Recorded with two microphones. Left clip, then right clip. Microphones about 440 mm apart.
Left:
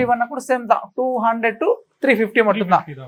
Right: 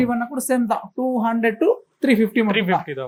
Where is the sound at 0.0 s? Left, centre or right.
Left.